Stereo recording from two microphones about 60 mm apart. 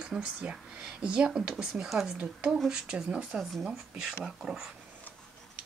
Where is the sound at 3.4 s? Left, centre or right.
Centre.